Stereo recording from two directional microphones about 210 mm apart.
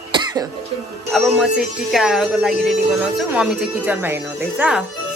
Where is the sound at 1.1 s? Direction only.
Centre (ahead or behind).